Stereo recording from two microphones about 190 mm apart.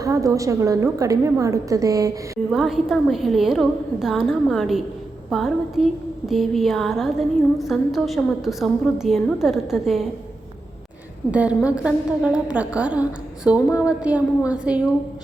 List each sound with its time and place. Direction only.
0.0 s a woman's voice: 15° right (ahead or behind)
2.5 s a woman's voice: centre (ahead or behind)
11.3 s a woman's voice: 5° right (ahead or behind)